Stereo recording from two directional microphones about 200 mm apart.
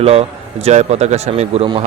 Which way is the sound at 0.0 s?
30° right (ahead or behind).